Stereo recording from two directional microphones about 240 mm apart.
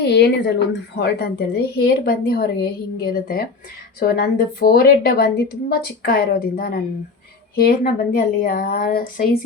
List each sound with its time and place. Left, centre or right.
0.0 s a woman's voice: left